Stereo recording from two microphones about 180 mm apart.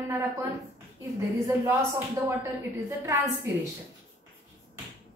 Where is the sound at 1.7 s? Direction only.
15° right (ahead or behind).